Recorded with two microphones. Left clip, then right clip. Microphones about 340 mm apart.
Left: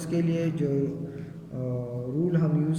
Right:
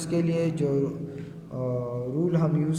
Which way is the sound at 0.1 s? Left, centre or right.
Centre.